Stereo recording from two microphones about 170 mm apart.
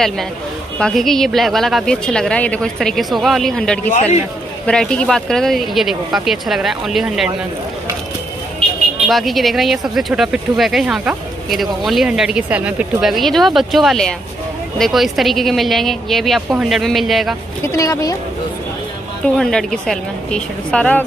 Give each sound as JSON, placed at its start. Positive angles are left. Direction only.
{"t": 0.7, "sound": "speech", "side_deg": 5}
{"t": 3.9, "sound": "a man's voice", "side_deg": 40}
{"t": 4.6, "sound": "speech", "side_deg": 5}
{"t": 9.0, "sound": "speech", "side_deg": 0}
{"t": 17.6, "sound": "speech", "side_deg": 20}
{"t": 19.2, "sound": "speech", "side_deg": 5}